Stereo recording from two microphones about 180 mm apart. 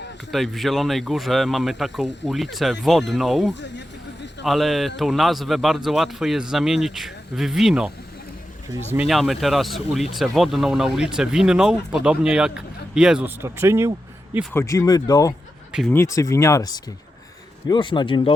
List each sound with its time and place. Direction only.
0.3 s speech: centre (ahead or behind)
3.5 s speech: 75° left (ahead or behind)
4.4 s speech: centre (ahead or behind)
9.0 s speech: centre (ahead or behind)
14.5 s speech: 15° left (ahead or behind)